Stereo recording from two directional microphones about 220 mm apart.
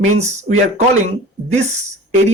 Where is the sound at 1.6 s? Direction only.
30° right (ahead or behind).